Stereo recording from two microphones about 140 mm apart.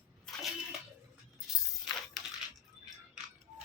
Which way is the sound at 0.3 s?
Centre (ahead or behind).